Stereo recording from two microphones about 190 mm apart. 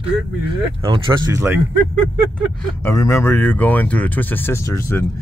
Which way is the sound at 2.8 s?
15° left (ahead or behind).